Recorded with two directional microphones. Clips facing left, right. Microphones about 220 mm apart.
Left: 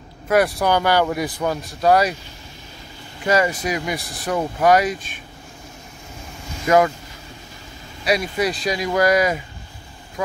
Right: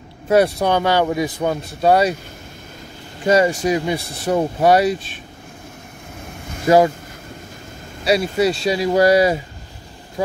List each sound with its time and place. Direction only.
0.6 s speech: 25° right (ahead or behind)
3.3 s speech: 30° right (ahead or behind)
6.7 s speech: 30° right (ahead or behind)
8.0 s speech: 30° right (ahead or behind)